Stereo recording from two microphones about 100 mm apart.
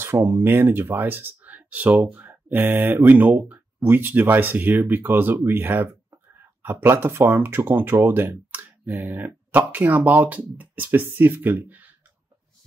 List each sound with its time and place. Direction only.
0.0 s speech: 20° right (ahead or behind)